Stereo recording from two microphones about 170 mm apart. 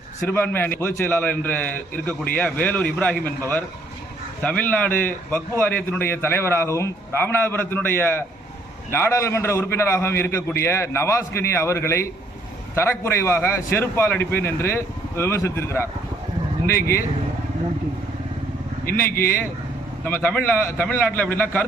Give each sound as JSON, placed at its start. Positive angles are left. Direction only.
{"t": 0.3, "sound": "a man's voice", "side_deg": 10}
{"t": 4.4, "sound": "a man's voice", "side_deg": 10}
{"t": 19.1, "sound": "a man's voice", "side_deg": 60}
{"t": 20.1, "sound": "a man's voice", "side_deg": 10}